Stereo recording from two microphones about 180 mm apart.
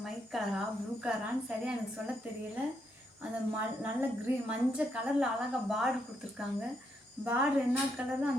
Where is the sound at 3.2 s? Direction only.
10° right (ahead or behind).